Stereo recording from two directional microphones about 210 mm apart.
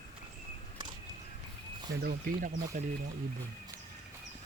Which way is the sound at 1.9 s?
45° right (ahead or behind).